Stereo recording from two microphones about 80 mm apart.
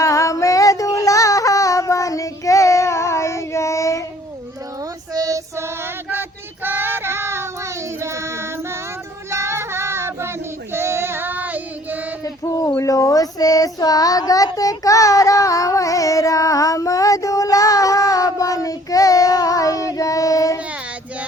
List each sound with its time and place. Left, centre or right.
0.0 s music: left
5.1 s female singing: right
5.5 s female singing: right
9.3 s child singing: right
12.2 s child singing: left